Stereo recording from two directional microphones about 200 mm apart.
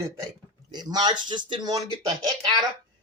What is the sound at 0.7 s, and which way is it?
Speech, 20° right (ahead or behind).